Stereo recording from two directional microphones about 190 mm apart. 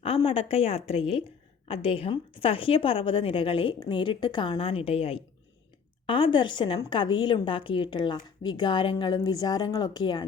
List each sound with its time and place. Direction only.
0.0 s a woman's voice: 30° left (ahead or behind)